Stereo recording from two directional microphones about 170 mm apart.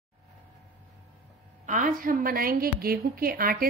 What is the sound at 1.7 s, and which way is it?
Speech, 50° right (ahead or behind).